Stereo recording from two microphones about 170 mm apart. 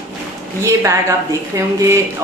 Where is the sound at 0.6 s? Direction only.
15° right (ahead or behind).